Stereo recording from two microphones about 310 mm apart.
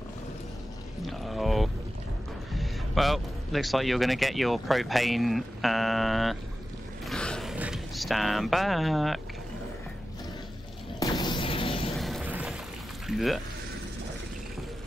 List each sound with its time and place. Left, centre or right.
1.0 s pour: centre
2.5 s speech: centre
7.1 s a sound: centre
11.0 s music: centre
12.0 s a sound: centre
13.0 s speech: centre